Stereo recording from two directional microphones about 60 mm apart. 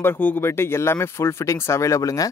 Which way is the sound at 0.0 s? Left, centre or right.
Left.